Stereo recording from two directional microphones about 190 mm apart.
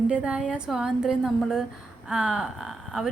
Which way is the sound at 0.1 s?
5° right (ahead or behind).